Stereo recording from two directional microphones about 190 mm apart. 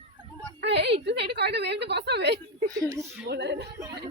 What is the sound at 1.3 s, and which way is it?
A woman's voice, 60° right (ahead or behind).